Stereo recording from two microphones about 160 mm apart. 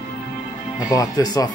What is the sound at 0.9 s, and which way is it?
Speech, 20° left (ahead or behind).